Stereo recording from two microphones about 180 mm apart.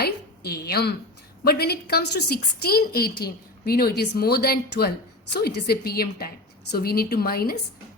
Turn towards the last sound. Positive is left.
turn(degrees=60)  # may be behind; listen again after turning